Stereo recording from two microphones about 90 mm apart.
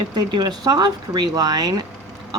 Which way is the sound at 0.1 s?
55° right (ahead or behind).